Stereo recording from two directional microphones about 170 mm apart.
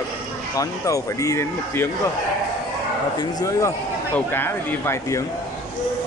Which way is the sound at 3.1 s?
20° left (ahead or behind).